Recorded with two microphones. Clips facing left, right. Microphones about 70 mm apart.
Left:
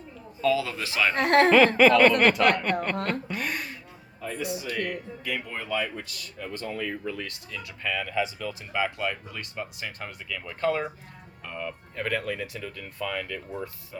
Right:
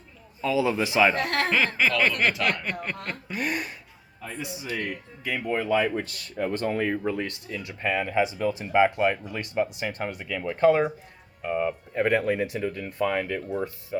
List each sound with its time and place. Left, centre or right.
0.4 s a man's voice: centre
1.1 s speech: left
1.5 s a woman's voice: centre
4.7 s speech: centre